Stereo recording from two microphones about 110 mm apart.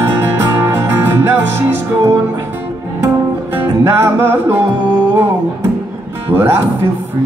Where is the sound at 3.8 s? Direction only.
20° right (ahead or behind).